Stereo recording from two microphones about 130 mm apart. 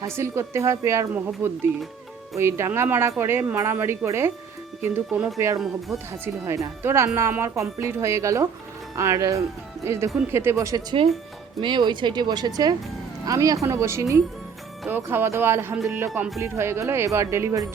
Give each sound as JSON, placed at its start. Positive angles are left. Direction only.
{"t": 0.0, "sound": "speech", "side_deg": -20}
{"t": 11.6, "sound": "speech", "side_deg": -35}